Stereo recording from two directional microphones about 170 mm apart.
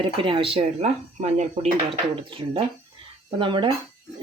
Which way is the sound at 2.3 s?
30° right (ahead or behind).